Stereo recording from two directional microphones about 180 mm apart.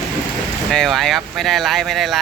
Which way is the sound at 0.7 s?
Centre (ahead or behind).